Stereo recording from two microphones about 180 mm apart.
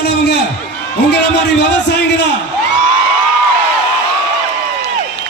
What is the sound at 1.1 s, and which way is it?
A man's voice, 70° left (ahead or behind).